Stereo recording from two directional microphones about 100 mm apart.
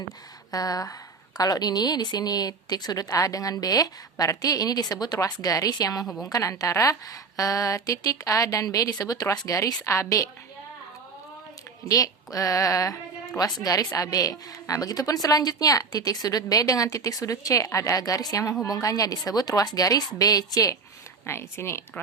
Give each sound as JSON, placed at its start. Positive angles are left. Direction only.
{"t": 0.5, "sound": "a woman's voice", "side_deg": 35}
{"t": 6.1, "sound": "a woman's voice", "side_deg": 0}
{"t": 6.3, "sound": "a woman's voice", "side_deg": 35}
{"t": 11.9, "sound": "a woman's voice", "side_deg": 35}
{"t": 21.2, "sound": "speech", "side_deg": 25}